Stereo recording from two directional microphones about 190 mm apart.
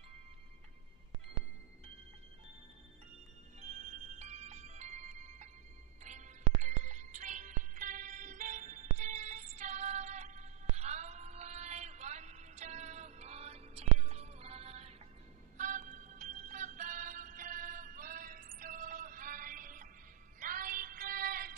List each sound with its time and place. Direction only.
3.6 s music: 40° right (ahead or behind)